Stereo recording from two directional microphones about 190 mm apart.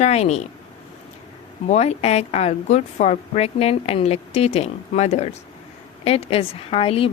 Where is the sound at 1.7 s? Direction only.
35° left (ahead or behind).